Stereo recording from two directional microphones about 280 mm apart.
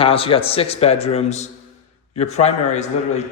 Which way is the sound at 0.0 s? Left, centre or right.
Centre.